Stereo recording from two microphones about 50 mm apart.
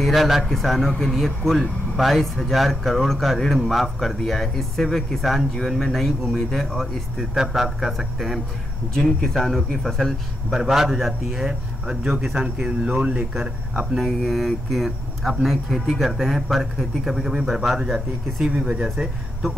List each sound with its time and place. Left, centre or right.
0.0 s speech: centre
8.9 s speech: centre
10.6 s speech: centre
11.4 s speech: centre
12.1 s speech: centre
12.8 s speech: right
13.9 s speech: centre